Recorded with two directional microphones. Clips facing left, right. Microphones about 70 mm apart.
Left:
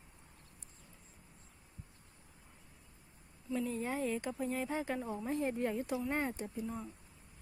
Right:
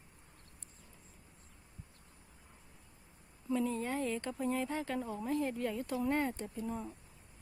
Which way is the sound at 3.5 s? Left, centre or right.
Centre.